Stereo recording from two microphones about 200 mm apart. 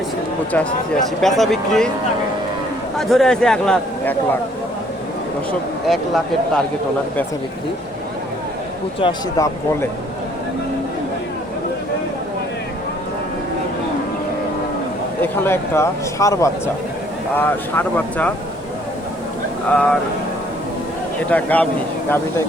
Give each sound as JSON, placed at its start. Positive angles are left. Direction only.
{"t": 1.2, "sound": "a man's voice", "side_deg": 0}
{"t": 3.0, "sound": "a man's voice", "side_deg": 0}
{"t": 5.5, "sound": "a man's voice", "side_deg": 0}
{"t": 9.0, "sound": "speech", "side_deg": 25}
{"t": 15.2, "sound": "speech", "side_deg": 10}
{"t": 19.7, "sound": "a man's voice", "side_deg": 5}
{"t": 21.2, "sound": "speech", "side_deg": 5}